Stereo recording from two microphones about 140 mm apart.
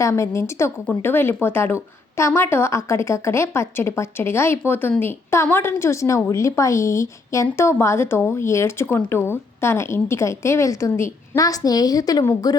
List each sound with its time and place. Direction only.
0.0 s speech: 20° left (ahead or behind)